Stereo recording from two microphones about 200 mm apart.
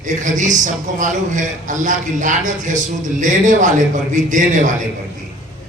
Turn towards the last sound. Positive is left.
turn(degrees=-40)  # may be behind; listen again after turning